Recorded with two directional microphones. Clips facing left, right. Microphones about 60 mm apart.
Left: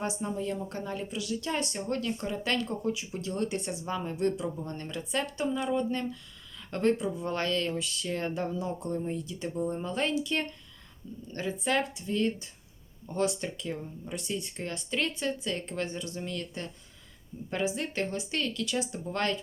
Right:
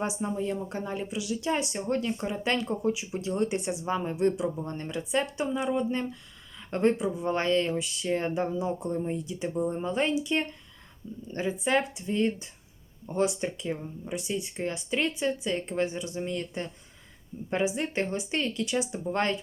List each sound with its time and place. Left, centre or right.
0.0 s speech: centre